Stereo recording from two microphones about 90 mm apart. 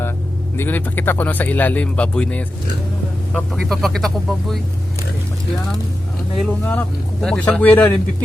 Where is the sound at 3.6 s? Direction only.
Centre (ahead or behind).